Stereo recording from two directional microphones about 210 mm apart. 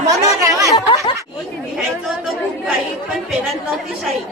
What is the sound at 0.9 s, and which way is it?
Chatter, 25° left (ahead or behind).